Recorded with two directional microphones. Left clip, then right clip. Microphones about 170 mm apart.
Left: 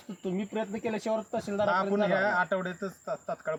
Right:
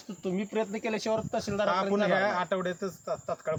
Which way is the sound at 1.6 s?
20° right (ahead or behind).